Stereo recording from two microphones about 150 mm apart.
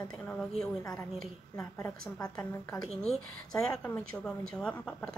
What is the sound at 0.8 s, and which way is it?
A woman's voice, 20° left (ahead or behind).